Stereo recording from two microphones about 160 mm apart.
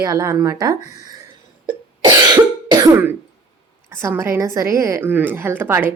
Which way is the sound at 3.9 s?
15° right (ahead or behind).